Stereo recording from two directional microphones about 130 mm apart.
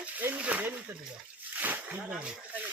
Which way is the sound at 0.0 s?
10° right (ahead or behind).